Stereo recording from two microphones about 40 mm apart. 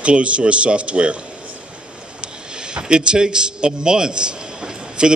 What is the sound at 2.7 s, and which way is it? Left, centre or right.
A man's voice, right.